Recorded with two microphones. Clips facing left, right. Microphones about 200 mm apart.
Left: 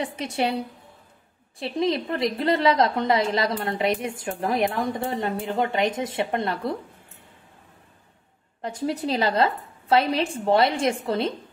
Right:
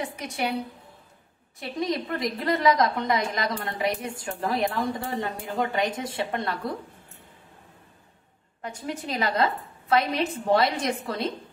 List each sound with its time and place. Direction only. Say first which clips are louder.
0.0 s a woman's voice: left 4 dB; 30° left (ahead or behind)
1.6 s a woman's voice: left 4 dB; 25° left (ahead or behind)
8.6 s a woman's voice: left 6 dB; 35° left (ahead or behind)